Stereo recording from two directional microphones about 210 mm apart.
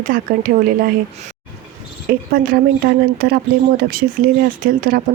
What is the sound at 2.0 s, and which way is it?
Speech, 45° right (ahead or behind).